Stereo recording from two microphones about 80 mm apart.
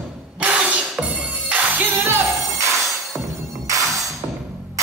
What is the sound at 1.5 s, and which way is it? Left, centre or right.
Music, right.